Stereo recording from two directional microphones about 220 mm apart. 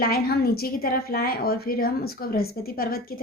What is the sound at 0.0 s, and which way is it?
A woman's voice, 45° left (ahead or behind).